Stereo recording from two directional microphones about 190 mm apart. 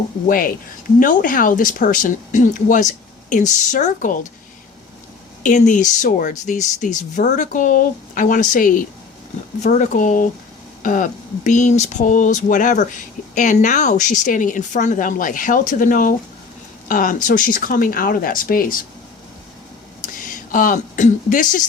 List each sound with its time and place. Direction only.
0.3 s a woman's voice: 50° left (ahead or behind)
5.4 s a woman's voice: 40° left (ahead or behind)
20.2 s speech: 45° left (ahead or behind)